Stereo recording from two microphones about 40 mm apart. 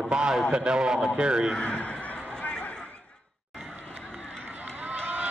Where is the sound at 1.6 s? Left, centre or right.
Left.